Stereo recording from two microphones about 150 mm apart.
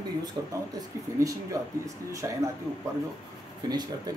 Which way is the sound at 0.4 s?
20° right (ahead or behind).